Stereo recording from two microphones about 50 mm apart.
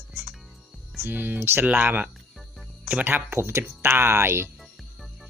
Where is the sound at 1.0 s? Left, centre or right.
Right.